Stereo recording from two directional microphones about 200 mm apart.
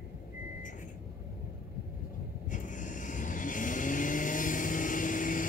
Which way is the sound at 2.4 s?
40° left (ahead or behind).